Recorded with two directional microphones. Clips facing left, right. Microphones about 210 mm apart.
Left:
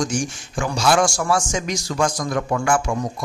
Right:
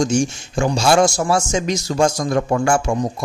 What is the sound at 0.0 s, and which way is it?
A man's voice, 25° right (ahead or behind).